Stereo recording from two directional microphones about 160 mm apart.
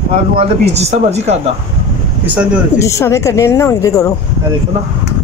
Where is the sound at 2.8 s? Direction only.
20° left (ahead or behind).